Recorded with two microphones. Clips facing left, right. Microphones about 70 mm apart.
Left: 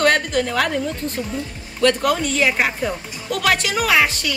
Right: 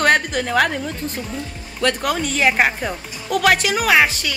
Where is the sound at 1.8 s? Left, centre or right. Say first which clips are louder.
Left 3 dB; centre.